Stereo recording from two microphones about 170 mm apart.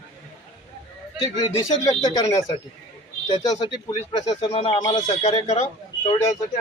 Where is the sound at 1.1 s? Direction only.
25° left (ahead or behind).